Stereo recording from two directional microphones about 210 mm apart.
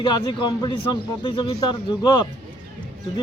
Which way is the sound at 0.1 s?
20° left (ahead or behind).